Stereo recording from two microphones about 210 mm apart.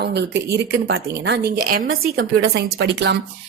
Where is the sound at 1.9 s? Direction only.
70° right (ahead or behind).